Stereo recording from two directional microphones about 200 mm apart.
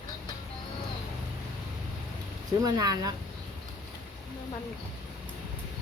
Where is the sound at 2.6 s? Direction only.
20° right (ahead or behind).